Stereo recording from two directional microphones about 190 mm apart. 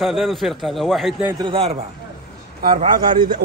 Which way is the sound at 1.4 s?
30° right (ahead or behind).